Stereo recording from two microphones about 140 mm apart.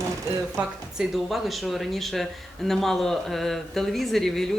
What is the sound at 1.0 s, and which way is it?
Speech, centre (ahead or behind).